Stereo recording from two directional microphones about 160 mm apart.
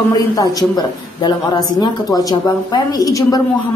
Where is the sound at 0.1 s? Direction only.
25° left (ahead or behind).